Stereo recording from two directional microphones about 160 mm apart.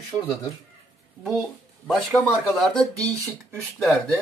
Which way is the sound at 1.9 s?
Centre (ahead or behind).